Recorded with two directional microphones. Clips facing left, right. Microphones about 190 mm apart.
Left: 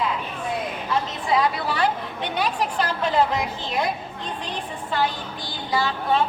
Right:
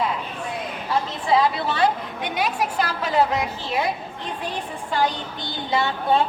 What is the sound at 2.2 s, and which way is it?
A woman's voice, 10° right (ahead or behind).